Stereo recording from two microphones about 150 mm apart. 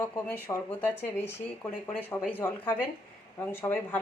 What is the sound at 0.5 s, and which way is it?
Speech, 25° left (ahead or behind).